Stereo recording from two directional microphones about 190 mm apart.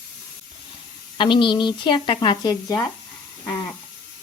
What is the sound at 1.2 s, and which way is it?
Speech, 25° left (ahead or behind).